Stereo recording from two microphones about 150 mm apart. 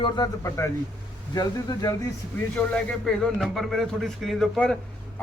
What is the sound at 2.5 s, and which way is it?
A man's voice, 5° left (ahead or behind).